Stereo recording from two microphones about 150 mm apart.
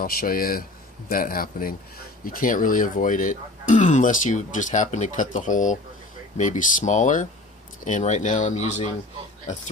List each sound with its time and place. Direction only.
0.0 s a man's voice: 75° left (ahead or behind); by 8.9 s 50° left (ahead or behind)